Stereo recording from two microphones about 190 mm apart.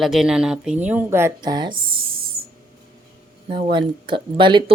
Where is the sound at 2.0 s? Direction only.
50° right (ahead or behind).